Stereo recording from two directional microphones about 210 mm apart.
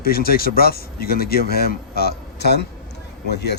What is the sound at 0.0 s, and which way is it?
Speech, 45° left (ahead or behind).